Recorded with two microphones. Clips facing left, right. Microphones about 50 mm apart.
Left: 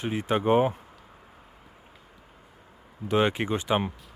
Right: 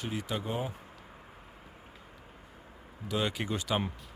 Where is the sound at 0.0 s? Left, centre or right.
Left.